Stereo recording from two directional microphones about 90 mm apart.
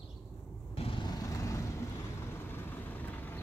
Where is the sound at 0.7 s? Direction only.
90° left.